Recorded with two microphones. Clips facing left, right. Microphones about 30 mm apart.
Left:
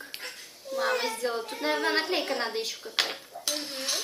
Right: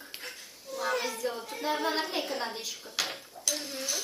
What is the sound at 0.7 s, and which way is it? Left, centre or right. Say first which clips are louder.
A woman's voice: left 3 dB; left.